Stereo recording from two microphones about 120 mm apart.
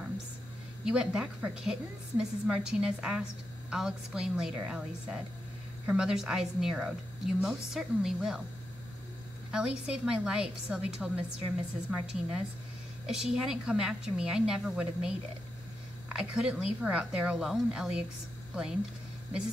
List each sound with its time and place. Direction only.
0.8 s a woman's voice: 5° right (ahead or behind)
9.5 s a woman's voice: 5° right (ahead or behind)